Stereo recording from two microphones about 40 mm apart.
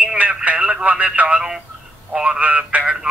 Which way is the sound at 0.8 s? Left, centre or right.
Right.